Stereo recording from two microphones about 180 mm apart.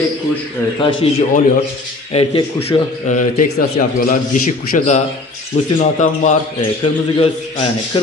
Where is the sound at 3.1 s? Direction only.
45° left (ahead or behind).